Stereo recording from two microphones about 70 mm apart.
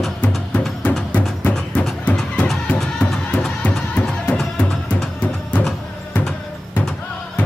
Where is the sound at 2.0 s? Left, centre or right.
Centre.